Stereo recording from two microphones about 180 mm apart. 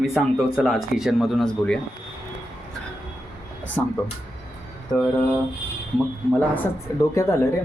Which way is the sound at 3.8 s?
10° left (ahead or behind).